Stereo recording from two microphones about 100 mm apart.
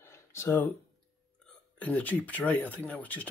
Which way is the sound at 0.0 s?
25° left (ahead or behind).